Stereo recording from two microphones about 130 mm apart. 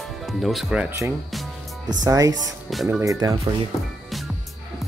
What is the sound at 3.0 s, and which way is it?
Speech, 25° right (ahead or behind).